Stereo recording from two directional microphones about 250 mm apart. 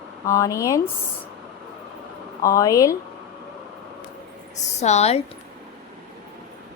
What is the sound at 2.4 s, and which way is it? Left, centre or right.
Speech, centre.